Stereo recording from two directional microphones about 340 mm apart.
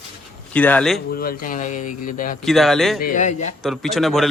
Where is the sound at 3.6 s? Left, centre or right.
Centre.